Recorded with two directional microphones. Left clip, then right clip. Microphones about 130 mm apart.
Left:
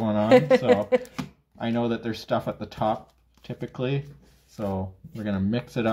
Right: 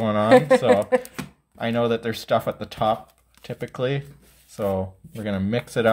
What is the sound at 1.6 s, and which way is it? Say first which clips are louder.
Speech: right 5 dB; 45° right (ahead or behind).